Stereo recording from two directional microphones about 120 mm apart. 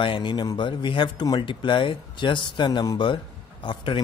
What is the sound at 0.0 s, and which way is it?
Speech, 45° left (ahead or behind).